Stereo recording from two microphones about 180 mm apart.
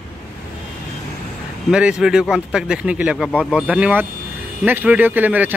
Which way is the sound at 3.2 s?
5° left (ahead or behind).